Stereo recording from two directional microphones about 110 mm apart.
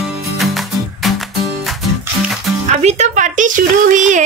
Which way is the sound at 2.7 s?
90° right.